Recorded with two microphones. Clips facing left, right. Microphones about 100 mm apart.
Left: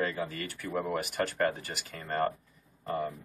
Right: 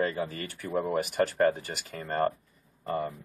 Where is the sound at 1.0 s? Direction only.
35° right (ahead or behind).